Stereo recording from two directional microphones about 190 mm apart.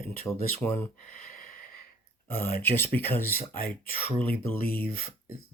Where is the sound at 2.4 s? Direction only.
10° left (ahead or behind).